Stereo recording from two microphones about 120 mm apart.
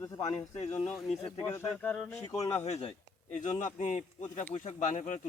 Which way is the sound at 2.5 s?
65° left (ahead or behind).